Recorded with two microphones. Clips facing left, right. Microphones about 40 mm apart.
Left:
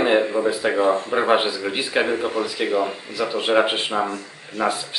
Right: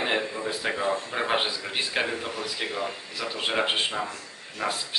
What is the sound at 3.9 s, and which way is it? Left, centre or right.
Speech, left.